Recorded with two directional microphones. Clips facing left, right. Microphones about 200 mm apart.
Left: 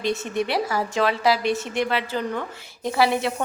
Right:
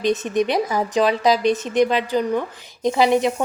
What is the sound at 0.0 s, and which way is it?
Speech, 20° right (ahead or behind).